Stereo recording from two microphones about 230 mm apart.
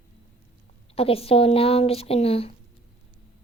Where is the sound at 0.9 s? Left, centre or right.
Left.